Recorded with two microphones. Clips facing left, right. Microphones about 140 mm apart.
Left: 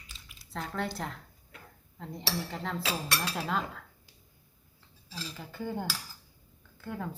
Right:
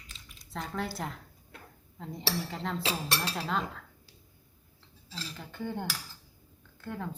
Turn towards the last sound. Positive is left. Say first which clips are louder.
# even
turn(degrees=5)  # may be behind; listen again after turning